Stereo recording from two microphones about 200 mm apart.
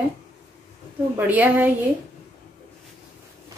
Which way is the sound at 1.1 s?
10° right (ahead or behind).